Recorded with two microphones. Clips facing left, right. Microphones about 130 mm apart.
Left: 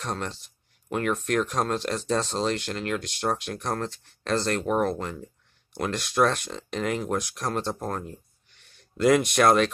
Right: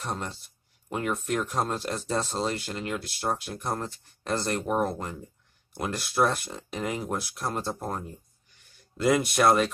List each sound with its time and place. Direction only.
0.0 s speech: 10° right (ahead or behind)
8.5 s a sound: 70° left (ahead or behind)
8.9 s speech: 5° right (ahead or behind)